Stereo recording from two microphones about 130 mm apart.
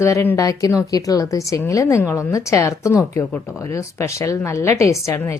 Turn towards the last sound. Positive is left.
turn(degrees=20)  # may be behind; listen again after turning